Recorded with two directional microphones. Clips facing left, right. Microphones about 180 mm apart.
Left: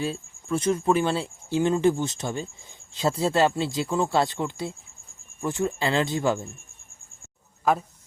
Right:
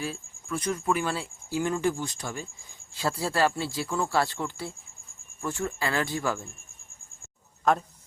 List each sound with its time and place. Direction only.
0.0 s speech: 25° left (ahead or behind)
7.6 s speech: 5° left (ahead or behind)